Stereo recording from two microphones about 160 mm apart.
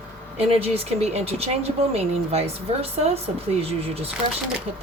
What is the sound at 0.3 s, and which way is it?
Speech, 40° right (ahead or behind).